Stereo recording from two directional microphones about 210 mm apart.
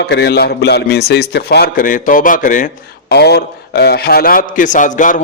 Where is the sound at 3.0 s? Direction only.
50° left (ahead or behind).